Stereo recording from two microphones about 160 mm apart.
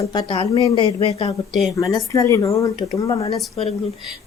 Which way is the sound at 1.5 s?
Centre (ahead or behind).